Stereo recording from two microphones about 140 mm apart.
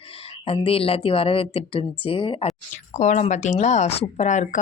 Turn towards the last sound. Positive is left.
turn(degrees=60)  # may be behind; listen again after turning